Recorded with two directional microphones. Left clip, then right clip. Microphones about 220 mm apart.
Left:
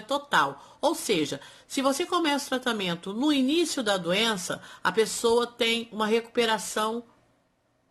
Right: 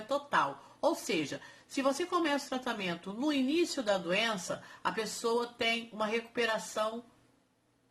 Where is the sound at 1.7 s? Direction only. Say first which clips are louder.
Left 5 dB; 40° left (ahead or behind).